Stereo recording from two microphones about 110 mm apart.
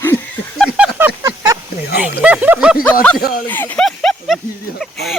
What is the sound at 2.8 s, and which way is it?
Speech, 15° left (ahead or behind).